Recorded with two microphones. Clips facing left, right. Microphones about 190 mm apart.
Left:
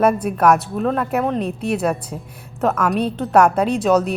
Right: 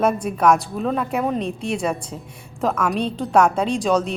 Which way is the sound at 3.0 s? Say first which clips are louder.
Left 2 dB; 5° left (ahead or behind).